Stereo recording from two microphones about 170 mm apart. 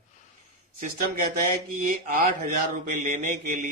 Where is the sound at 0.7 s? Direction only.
55° right (ahead or behind).